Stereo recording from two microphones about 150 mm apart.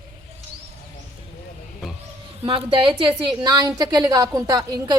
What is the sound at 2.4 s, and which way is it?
A woman's voice, 35° right (ahead or behind).